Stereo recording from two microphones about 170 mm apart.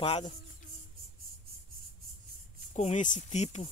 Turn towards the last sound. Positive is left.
turn(degrees=40)  # may be behind; listen again after turning